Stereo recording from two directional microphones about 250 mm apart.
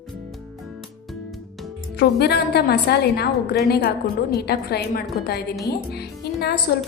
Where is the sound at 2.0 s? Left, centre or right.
Left.